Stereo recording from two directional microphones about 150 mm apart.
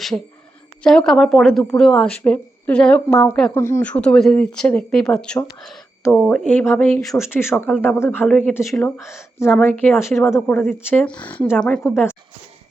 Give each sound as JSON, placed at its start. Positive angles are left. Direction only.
{"t": 0.8, "sound": "a woman's voice", "side_deg": 5}
{"t": 3.5, "sound": "speech", "side_deg": 15}